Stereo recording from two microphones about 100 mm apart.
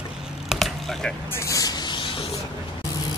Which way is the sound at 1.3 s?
30° left (ahead or behind).